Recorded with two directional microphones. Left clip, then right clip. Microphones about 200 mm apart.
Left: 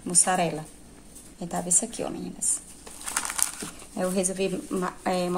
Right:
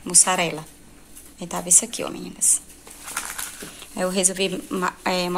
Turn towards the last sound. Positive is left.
turn(degrees=0)  # may be behind; listen again after turning